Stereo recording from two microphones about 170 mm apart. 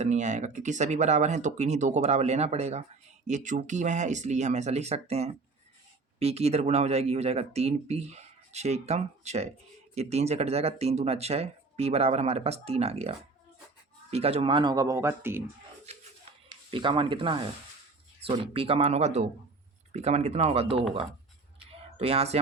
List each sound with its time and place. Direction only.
0.0 s speech: 45° right (ahead or behind); by 15.4 s 15° right (ahead or behind)
16.5 s speech: 30° right (ahead or behind)
21.9 s speech: 35° right (ahead or behind)